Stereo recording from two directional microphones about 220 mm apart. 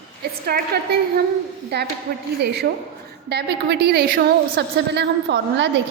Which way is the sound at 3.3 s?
50° right (ahead or behind).